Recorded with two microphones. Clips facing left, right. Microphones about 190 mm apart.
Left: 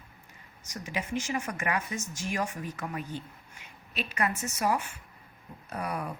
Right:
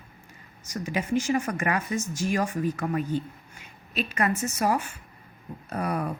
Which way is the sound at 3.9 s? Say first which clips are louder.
Right 5 dB; 40° right (ahead or behind).